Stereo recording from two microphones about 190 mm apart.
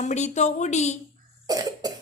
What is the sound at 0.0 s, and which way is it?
Speech, 35° left (ahead or behind).